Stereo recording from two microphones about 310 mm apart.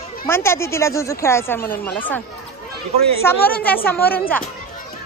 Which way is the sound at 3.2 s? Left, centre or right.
Centre.